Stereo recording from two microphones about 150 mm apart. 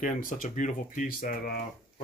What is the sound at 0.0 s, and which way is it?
Speech, 60° left (ahead or behind).